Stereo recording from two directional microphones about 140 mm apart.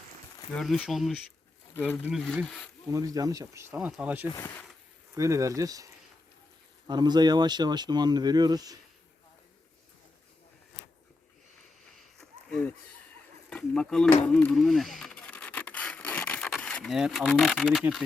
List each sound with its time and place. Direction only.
0.5 s speech: 5° left (ahead or behind)
1.7 s speech: 15° left (ahead or behind)
2.9 s speech: 25° right (ahead or behind)
3.7 s speech: 10° right (ahead or behind)
5.1 s speech: 20° right (ahead or behind)
12.5 s a sound: 5° left (ahead or behind)
13.5 s speech: 5° left (ahead or behind)
14.1 s rub: 10° left (ahead or behind)
17.2 s speech: 5° left (ahead or behind)